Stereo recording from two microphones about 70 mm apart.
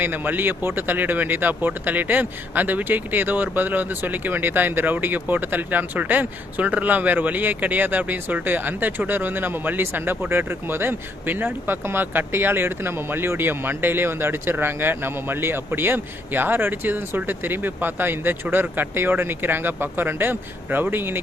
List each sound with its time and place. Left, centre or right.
0.0 s speech: right